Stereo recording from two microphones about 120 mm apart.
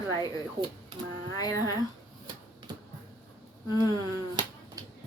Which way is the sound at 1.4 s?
30° left (ahead or behind).